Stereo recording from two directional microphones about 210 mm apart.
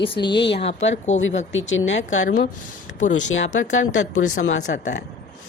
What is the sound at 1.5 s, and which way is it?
Speech, 65° left (ahead or behind).